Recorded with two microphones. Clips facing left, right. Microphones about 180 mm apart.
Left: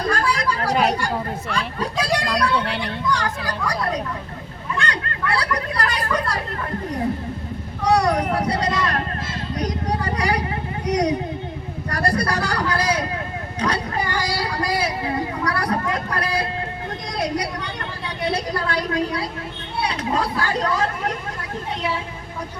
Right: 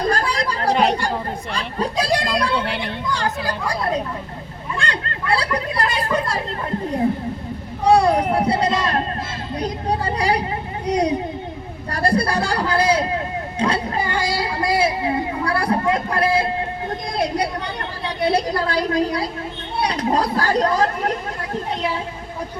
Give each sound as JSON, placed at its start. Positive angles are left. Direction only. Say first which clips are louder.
{"t": 0.1, "sound": "chatter", "louder": "even", "side_deg": -35}
{"t": 1.0, "sound": "speech", "louder": "right 1 dB", "side_deg": -30}
{"t": 4.8, "sound": "speech", "louder": "left 1 dB", "side_deg": -30}
{"t": 7.9, "sound": "speech", "louder": "right 3 dB", "side_deg": -30}
{"t": 13.6, "sound": "a sound", "louder": "right 2 dB", "side_deg": -25}
{"t": 17.2, "sound": "a woman's voice", "louder": "right 2 dB", "side_deg": -30}